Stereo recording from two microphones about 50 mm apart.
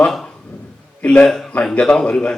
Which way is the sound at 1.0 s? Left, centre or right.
Left.